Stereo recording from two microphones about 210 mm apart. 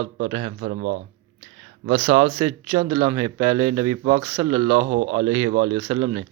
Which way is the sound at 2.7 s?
35° right (ahead or behind).